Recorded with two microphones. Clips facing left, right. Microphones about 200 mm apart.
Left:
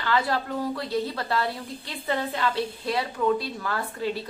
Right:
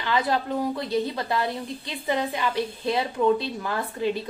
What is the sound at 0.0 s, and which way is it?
A woman's voice, 20° right (ahead or behind).